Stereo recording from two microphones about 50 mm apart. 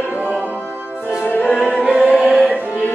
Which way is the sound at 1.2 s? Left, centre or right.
Left.